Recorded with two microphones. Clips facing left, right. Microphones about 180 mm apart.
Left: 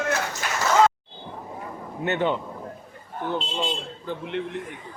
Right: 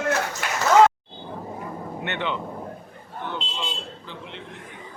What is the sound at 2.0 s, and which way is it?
Vehicle, 40° left (ahead or behind).